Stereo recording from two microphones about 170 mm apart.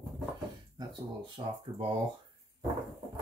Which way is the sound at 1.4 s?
25° right (ahead or behind).